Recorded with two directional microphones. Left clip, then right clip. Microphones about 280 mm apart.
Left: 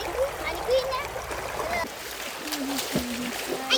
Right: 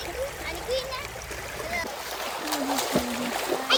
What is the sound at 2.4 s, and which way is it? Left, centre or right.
Splash, centre.